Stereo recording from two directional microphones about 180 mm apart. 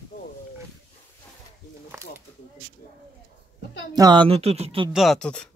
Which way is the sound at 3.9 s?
25° right (ahead or behind).